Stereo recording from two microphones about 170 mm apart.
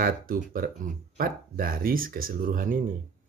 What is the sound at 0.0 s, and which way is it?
Speech, 55° right (ahead or behind).